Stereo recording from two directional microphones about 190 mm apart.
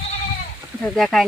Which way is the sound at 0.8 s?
5° left (ahead or behind).